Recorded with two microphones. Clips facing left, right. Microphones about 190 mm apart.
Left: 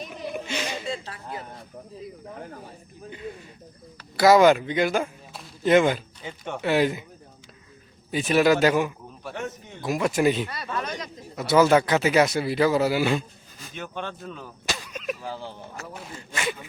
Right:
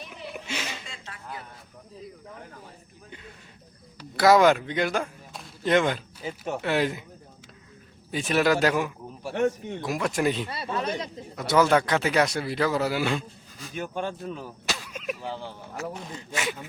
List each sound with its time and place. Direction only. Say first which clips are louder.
0.4 s a sound: left 4 dB; 5° right (ahead or behind)
0.9 s a sound: left 9 dB; 35° left (ahead or behind)
4.2 s speech: left 2 dB; centre (ahead or behind)
6.2 s speech: left 1 dB; 5° right (ahead or behind)
8.1 s speech: left 3 dB; centre (ahead or behind)
10.5 s a man's voice: right 2 dB; 25° right (ahead or behind)
11.3 s speech: left 3 dB; 5° left (ahead or behind)
14.1 s speech: right 3 dB; 10° right (ahead or behind)
16.3 s speech: left 1 dB; 5° right (ahead or behind)